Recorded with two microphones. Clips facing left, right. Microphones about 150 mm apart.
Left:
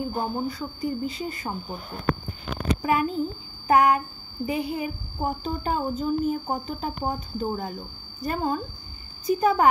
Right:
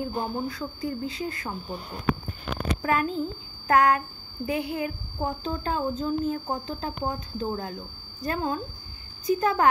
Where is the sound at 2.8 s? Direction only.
5° left (ahead or behind).